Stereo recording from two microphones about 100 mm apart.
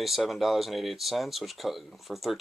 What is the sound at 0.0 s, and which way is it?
Speech, centre (ahead or behind).